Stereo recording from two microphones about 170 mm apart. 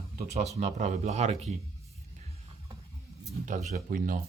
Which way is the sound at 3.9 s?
55° right (ahead or behind).